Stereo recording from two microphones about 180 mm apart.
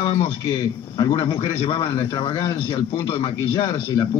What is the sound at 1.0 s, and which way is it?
Speech, 25° left (ahead or behind).